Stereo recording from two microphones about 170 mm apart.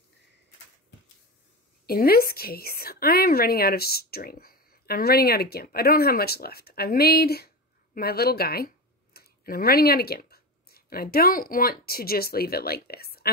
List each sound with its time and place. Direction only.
1.9 s a woman's voice: 65° left (ahead or behind)